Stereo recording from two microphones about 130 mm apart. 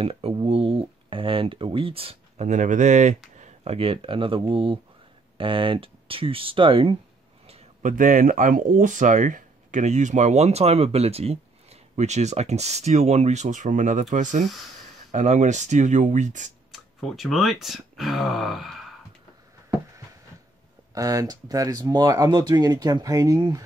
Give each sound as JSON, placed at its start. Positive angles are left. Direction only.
{"t": 0.0, "sound": "a sound", "side_deg": -45}
{"t": 2.4, "sound": "speech", "side_deg": -75}
{"t": 7.8, "sound": "speech", "side_deg": -90}
{"t": 16.7, "sound": "speech", "side_deg": 0}
{"t": 20.9, "sound": "speech", "side_deg": -25}